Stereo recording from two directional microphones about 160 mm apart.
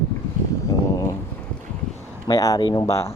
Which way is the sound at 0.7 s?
20° left (ahead or behind).